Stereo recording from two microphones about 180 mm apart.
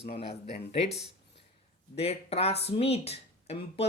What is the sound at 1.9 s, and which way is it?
Speech, 35° left (ahead or behind).